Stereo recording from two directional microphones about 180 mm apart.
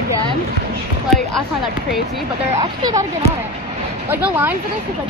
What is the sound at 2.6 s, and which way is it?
Speech, 20° right (ahead or behind).